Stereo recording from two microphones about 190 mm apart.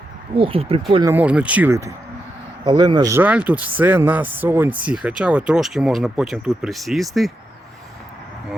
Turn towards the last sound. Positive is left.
turn(degrees=0)  # may be behind; listen again after turning